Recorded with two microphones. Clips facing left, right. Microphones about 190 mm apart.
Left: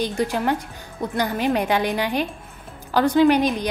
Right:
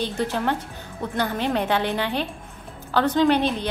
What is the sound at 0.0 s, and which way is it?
A woman's voice, 10° left (ahead or behind).